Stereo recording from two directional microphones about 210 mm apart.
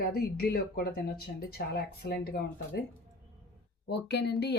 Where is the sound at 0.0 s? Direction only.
45° left (ahead or behind).